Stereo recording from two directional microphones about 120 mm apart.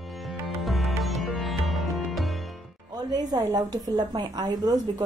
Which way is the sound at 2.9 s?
30° right (ahead or behind).